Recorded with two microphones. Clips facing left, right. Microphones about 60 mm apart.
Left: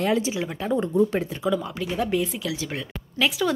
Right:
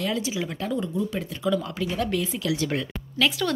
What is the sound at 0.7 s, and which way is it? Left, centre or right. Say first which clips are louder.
Speech: left 8 dB; left.